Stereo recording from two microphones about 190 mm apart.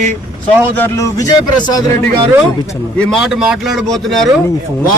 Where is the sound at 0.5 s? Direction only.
10° left (ahead or behind).